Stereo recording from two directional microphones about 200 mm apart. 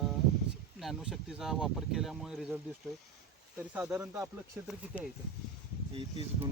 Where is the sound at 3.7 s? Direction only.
5° right (ahead or behind).